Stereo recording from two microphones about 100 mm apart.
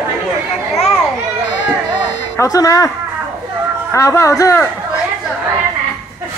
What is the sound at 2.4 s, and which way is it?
Speech, 35° left (ahead or behind).